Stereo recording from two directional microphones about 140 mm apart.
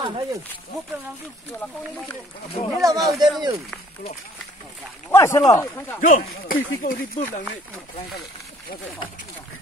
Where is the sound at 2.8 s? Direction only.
25° right (ahead or behind).